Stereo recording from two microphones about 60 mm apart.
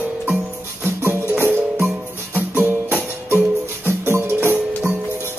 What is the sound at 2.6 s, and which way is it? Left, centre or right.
Music, right.